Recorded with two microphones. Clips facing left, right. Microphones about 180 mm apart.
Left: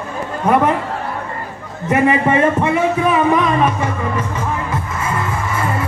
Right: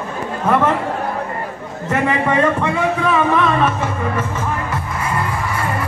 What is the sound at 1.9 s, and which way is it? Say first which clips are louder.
A man's voice: left 3 dB; 20° left (ahead or behind).